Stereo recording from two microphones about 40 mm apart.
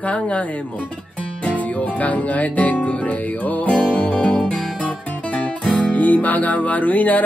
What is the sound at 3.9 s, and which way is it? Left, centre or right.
Music, left.